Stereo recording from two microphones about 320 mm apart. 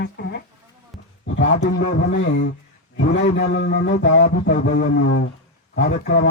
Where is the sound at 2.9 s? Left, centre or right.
Left.